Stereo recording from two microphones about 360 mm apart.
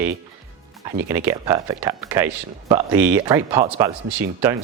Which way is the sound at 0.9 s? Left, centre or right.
Centre.